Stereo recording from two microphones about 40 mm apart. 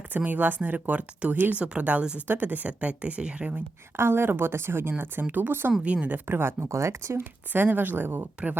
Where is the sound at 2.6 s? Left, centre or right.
Right.